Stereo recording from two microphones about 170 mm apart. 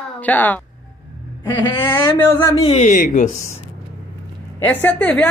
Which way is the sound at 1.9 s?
10° left (ahead or behind).